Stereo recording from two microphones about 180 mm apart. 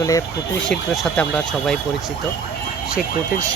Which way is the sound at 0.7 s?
5° left (ahead or behind).